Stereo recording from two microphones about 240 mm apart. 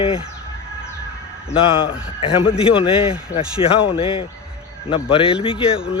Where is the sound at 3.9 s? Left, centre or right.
Left.